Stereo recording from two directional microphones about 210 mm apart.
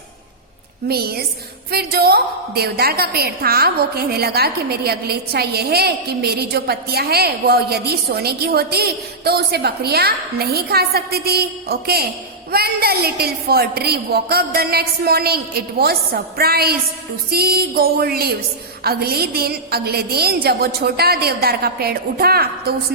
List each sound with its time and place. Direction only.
0.9 s a woman's voice: 50° right (ahead or behind)